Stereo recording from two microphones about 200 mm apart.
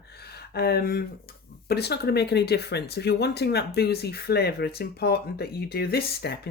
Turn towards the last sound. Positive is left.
turn(degrees=50)  # may be behind; listen again after turning